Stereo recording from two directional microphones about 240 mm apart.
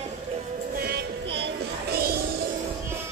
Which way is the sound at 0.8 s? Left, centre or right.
Right.